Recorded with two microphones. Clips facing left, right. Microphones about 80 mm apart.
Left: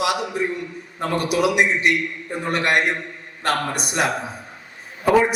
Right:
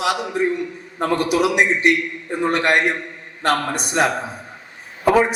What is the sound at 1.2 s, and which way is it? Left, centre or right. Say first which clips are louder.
A man's voice: even; right.